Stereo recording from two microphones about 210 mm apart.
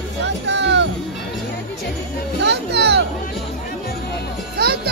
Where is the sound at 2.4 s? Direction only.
55° right (ahead or behind).